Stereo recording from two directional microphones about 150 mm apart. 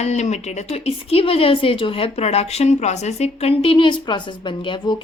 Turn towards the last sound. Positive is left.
turn(degrees=35)  # may be behind; listen again after turning